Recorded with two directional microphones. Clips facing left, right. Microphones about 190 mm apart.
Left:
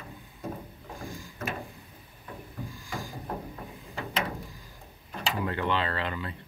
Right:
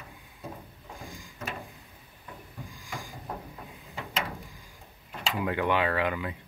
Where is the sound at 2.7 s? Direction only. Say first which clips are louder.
Left 1 dB; 15° right (ahead or behind).